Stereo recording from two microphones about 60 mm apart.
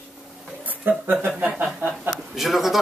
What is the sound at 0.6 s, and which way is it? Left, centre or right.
Speech, right.